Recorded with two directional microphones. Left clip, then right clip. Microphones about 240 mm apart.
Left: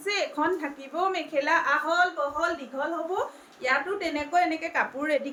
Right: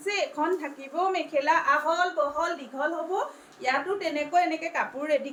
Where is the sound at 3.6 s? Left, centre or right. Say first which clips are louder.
Left 1 dB; centre.